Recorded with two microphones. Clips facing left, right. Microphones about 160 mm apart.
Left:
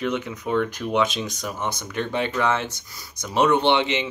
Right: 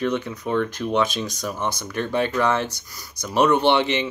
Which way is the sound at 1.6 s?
20° left (ahead or behind).